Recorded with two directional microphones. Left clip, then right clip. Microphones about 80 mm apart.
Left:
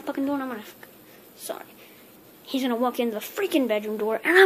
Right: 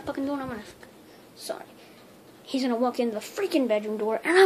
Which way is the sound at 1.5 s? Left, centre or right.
Centre.